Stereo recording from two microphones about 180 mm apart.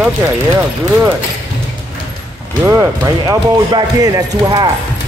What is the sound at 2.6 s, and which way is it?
Speech, 20° right (ahead or behind).